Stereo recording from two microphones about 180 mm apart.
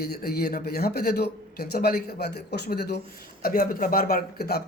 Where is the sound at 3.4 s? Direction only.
55° left (ahead or behind).